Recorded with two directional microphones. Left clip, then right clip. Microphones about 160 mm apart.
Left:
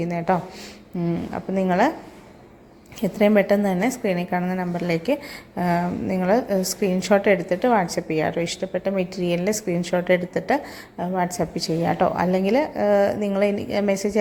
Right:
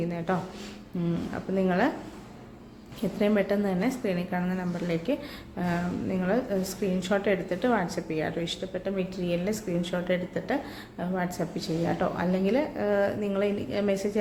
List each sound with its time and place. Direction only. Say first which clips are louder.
1.0 s a woman's voice: left 6 dB; 30° left (ahead or behind)
3.0 s a woman's voice: left 8 dB; 35° left (ahead or behind)